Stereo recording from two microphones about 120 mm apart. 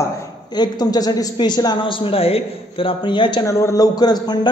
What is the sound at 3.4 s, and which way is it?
Speech, 25° left (ahead or behind).